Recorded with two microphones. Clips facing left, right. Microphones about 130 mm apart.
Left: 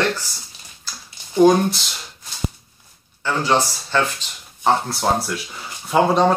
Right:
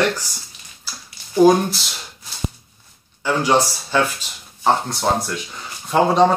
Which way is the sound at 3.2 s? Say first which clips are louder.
Right 2 dB; 10° right (ahead or behind).